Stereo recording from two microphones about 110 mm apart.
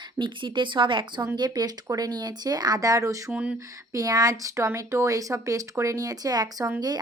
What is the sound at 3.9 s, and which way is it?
Speech, 35° right (ahead or behind).